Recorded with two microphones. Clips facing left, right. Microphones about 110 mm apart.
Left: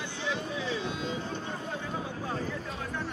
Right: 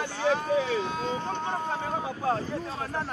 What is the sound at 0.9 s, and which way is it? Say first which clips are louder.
Vehicle: right 4 dB; 40° right (ahead or behind).